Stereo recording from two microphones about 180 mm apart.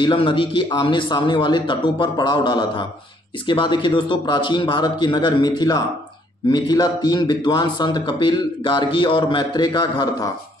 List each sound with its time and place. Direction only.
0.0 s a man's voice: 30° left (ahead or behind)